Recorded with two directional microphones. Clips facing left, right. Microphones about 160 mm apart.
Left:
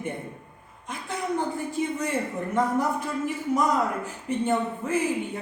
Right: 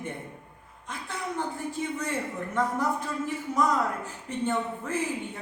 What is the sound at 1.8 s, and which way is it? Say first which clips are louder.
Speech: left 4 dB; 15° left (ahead or behind).